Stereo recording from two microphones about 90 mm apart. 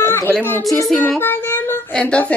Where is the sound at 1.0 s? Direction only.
25° left (ahead or behind).